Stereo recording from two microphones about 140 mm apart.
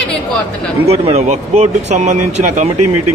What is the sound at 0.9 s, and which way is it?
Speech, 50° right (ahead or behind).